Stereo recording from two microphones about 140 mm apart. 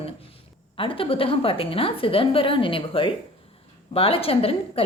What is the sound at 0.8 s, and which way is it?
A woman's voice, 40° left (ahead or behind).